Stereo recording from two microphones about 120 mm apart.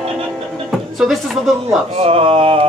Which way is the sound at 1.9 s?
55° right (ahead or behind).